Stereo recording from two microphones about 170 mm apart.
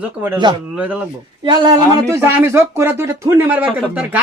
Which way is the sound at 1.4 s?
25° right (ahead or behind).